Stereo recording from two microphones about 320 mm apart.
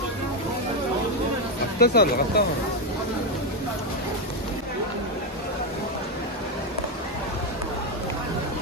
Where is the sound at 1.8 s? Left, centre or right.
Left.